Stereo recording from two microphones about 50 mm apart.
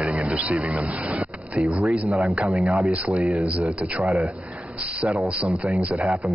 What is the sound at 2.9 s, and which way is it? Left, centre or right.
A man's voice, right.